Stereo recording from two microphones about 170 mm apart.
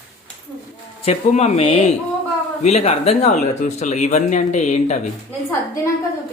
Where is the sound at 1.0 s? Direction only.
40° left (ahead or behind).